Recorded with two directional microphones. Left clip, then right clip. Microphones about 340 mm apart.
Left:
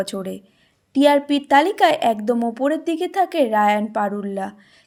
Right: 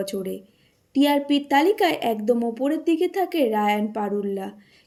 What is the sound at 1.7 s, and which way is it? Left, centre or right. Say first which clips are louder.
Speech: left 4 dB; left.